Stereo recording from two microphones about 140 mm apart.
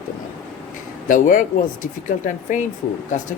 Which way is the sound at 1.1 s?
70° left (ahead or behind).